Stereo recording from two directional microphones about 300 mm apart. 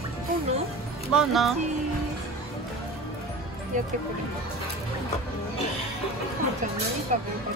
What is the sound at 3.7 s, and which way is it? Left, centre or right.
Speech, right.